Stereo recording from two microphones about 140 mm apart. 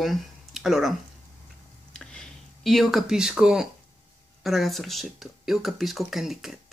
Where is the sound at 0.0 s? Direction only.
Centre (ahead or behind).